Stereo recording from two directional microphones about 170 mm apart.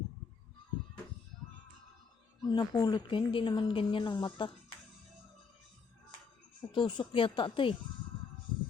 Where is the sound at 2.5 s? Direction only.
25° left (ahead or behind).